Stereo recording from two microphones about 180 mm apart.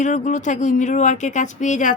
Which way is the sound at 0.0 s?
45° left (ahead or behind).